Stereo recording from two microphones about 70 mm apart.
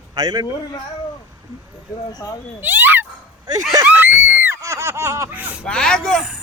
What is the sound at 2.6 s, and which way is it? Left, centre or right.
Speech, right.